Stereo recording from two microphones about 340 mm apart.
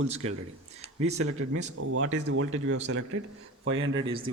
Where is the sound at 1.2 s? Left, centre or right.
Right.